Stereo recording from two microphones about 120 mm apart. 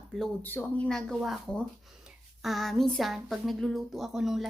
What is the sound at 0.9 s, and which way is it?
Speech, 5° left (ahead or behind).